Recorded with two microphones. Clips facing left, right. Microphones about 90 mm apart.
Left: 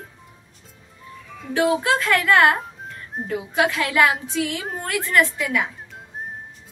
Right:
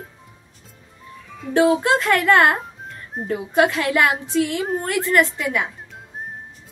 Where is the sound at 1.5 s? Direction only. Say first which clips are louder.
Right 3 dB; 30° right (ahead or behind).